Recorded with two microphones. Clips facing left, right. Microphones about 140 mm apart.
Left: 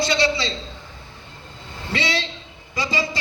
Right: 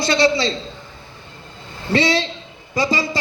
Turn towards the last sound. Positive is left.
turn(degrees=-35)  # may be behind; listen again after turning